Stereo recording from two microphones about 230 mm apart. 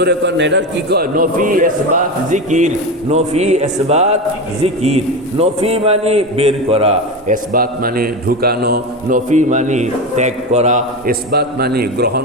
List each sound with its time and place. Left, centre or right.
0.0 s a man's voice: right